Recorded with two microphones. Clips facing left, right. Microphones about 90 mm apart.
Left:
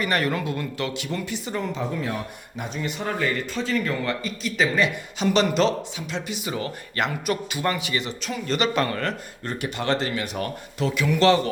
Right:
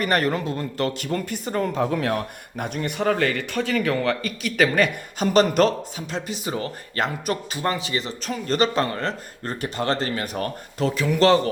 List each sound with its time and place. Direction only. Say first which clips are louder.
0.0 s a man's voice: right 2 dB; 40° right (ahead or behind)
1.9 s speech: right 5 dB; 70° right (ahead or behind)
4.0 s a man's voice: right 3 dB; 65° right (ahead or behind); by 11.3 s 35° right (ahead or behind)